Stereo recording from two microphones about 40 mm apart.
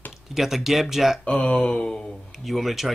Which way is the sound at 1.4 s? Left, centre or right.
Left.